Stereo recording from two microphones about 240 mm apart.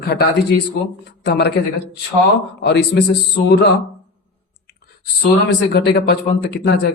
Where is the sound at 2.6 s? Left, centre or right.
Left.